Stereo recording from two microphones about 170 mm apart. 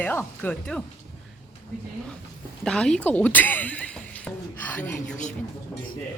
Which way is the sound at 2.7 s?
5° left (ahead or behind).